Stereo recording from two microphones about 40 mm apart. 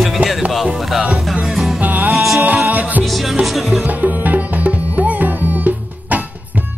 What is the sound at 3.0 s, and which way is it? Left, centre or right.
Music, centre.